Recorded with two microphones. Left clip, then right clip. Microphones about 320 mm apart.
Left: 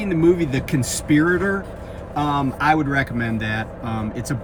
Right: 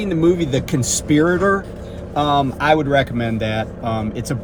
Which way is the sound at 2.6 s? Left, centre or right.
Centre.